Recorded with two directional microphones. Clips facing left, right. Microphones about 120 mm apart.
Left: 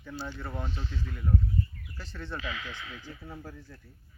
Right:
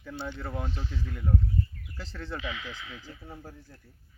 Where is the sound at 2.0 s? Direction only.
90° right.